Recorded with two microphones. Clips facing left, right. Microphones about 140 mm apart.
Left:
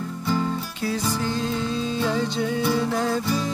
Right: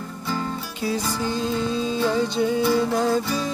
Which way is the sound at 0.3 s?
Centre (ahead or behind).